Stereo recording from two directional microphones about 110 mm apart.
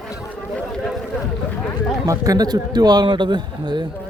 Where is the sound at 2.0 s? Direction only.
30° right (ahead or behind).